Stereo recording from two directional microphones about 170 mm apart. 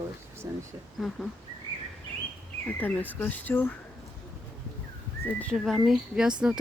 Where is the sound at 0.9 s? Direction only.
Centre (ahead or behind).